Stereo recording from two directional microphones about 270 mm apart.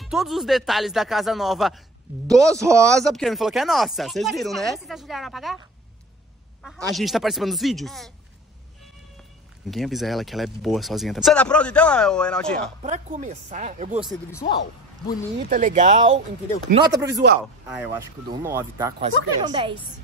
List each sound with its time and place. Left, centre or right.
0.0 s speech: centre
2.2 s speech: centre
2.9 s speech: centre
6.9 s speech: centre
9.7 s speech: centre
12.8 s speech: right
14.4 s speech: left
15.5 s speech: right
16.7 s speech: centre